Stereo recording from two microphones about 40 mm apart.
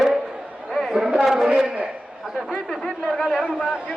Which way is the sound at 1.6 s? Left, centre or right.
Right.